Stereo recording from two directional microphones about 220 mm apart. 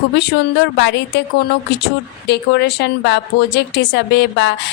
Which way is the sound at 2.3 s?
50° left (ahead or behind).